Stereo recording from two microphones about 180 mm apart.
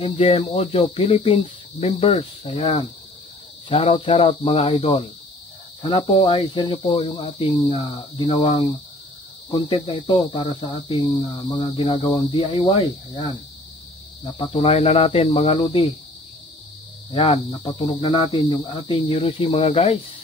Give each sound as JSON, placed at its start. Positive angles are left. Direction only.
{"t": 0.0, "sound": "speech", "side_deg": 35}
{"t": 17.1, "sound": "speech", "side_deg": 30}